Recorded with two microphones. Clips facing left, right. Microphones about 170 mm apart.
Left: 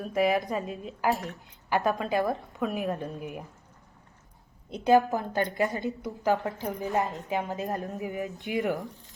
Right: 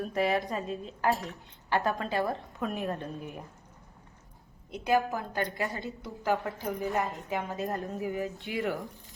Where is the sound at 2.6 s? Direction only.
Centre (ahead or behind).